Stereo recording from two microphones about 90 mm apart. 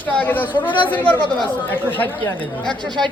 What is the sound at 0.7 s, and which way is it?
Speech, 65° left (ahead or behind).